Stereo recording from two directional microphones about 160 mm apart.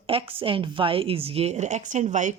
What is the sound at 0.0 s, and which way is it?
A woman's voice, 35° right (ahead or behind).